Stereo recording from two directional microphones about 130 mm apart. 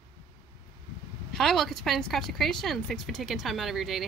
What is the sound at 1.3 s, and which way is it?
Speech, centre (ahead or behind).